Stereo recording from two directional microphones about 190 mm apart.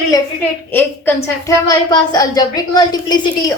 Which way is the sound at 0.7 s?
10° left (ahead or behind).